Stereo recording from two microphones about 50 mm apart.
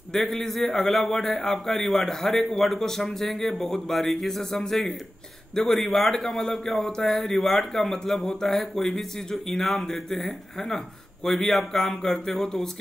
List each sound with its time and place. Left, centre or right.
0.1 s a man's voice: centre